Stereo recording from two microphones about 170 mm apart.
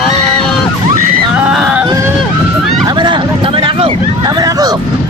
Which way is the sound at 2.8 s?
25° right (ahead or behind).